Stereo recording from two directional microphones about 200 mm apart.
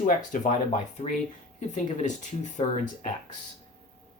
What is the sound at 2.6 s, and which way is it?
Speech, 25° left (ahead or behind).